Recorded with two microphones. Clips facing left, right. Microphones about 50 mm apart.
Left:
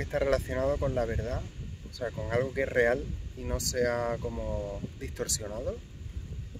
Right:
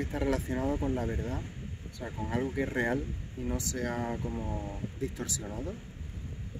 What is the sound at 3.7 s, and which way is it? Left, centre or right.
Speech, left.